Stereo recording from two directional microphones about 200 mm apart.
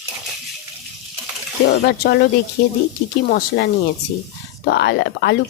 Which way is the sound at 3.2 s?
55° left (ahead or behind).